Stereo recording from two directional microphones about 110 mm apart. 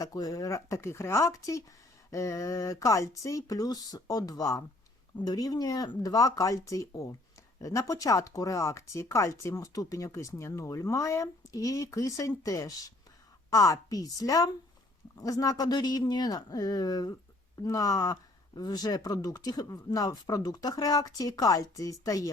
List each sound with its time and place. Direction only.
0.0 s speech: 35° left (ahead or behind)